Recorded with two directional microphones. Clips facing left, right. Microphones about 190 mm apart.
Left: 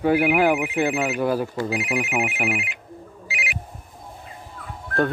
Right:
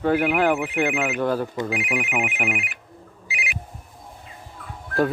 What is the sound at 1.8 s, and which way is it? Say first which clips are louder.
Speech: left 1 dB; 35° left (ahead or behind).